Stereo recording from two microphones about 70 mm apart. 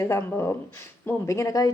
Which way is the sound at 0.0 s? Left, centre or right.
Left.